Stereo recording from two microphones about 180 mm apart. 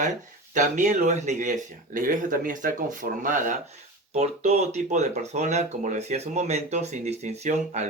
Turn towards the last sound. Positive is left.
turn(degrees=-40)  # may be behind; listen again after turning